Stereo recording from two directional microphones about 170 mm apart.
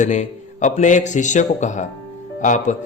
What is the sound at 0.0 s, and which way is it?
A man's voice, 45° left (ahead or behind).